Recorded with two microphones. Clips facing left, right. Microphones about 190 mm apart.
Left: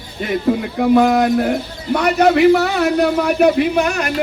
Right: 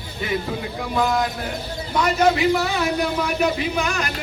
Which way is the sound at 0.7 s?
60° left (ahead or behind).